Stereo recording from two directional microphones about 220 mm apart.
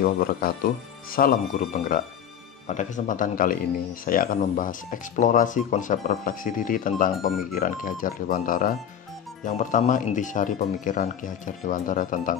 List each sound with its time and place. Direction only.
0.0 s speech: 40° left (ahead or behind)